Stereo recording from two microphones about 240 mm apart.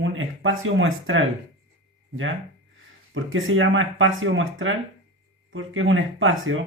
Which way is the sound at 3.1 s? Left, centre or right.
Right.